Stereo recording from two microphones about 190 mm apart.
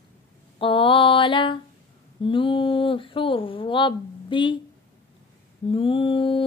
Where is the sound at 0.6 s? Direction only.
30° left (ahead or behind).